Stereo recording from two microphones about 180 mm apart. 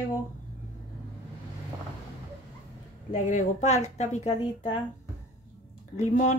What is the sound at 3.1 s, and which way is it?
Speech, 40° left (ahead or behind).